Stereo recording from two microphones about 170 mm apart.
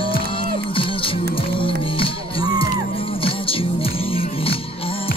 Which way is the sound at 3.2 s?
35° left (ahead or behind).